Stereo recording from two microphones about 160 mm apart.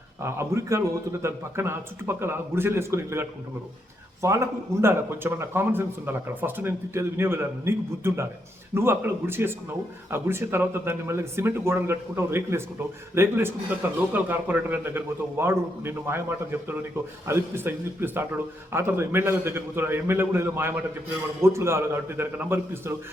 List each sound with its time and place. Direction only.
0.2 s a man's voice: 15° right (ahead or behind)